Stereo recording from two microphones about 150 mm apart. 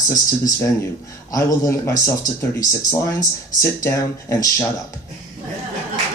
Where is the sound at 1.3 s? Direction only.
20° left (ahead or behind).